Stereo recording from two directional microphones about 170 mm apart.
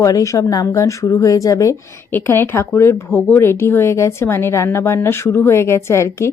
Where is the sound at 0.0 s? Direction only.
20° left (ahead or behind).